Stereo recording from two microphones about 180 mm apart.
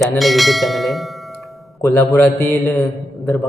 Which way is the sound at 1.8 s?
15° left (ahead or behind).